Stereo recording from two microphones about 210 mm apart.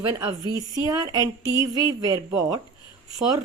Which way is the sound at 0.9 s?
20° right (ahead or behind).